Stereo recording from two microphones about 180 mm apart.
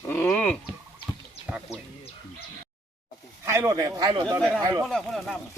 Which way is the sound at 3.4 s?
15° right (ahead or behind).